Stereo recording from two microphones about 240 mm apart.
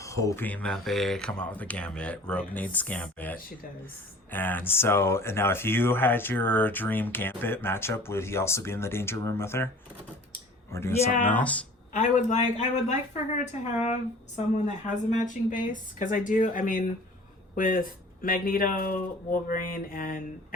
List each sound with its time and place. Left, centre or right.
0.0 s speech: centre
10.7 s speech: centre
10.9 s speech: left
11.2 s speech: centre
11.9 s speech: left